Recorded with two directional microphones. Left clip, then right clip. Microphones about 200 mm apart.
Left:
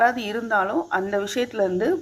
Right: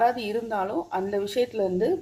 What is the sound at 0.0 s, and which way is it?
Speech, 5° left (ahead or behind).